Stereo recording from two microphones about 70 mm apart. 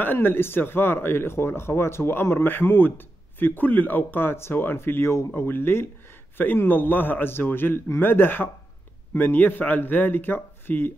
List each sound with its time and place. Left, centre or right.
0.0 s a man's voice: left